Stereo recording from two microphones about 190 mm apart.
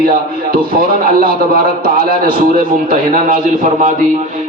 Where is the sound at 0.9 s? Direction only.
50° right (ahead or behind).